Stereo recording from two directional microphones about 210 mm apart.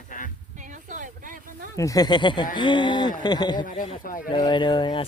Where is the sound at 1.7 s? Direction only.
15° left (ahead or behind).